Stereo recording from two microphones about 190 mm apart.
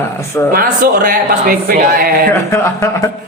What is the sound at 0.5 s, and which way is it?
A man's voice, 50° right (ahead or behind).